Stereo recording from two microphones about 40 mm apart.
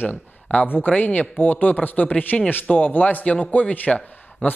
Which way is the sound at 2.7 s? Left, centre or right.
Left.